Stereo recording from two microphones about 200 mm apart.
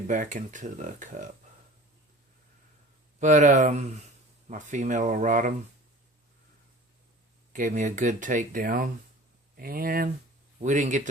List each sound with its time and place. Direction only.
0.1 s speech: 40° right (ahead or behind)
3.2 s speech: 40° right (ahead or behind)
7.5 s speech: 40° right (ahead or behind)